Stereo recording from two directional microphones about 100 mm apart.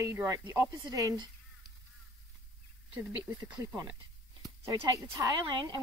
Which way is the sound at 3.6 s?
35° right (ahead or behind).